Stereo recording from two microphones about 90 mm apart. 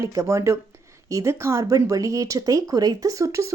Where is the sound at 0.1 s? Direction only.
35° right (ahead or behind).